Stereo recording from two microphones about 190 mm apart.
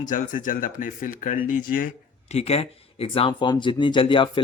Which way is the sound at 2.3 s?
30° left (ahead or behind).